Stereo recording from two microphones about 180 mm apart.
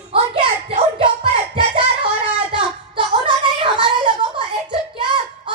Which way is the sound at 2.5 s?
30° right (ahead or behind).